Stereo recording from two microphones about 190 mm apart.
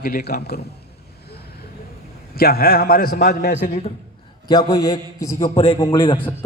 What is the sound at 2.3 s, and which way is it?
A man's voice, 55° left (ahead or behind).